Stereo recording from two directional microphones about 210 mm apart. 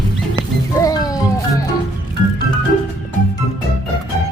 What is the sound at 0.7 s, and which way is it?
Music, 15° left (ahead or behind).